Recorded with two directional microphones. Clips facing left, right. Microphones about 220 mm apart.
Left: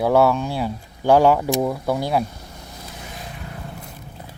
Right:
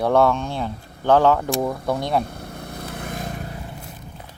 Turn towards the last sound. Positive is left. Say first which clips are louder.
# right 6 dB
turn(degrees=-45)  # may be behind; listen again after turning